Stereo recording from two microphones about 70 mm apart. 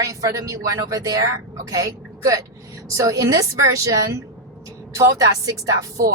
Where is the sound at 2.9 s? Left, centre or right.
Right.